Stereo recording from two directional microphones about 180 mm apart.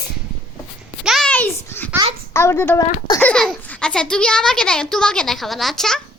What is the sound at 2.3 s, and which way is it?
Speech, 15° left (ahead or behind).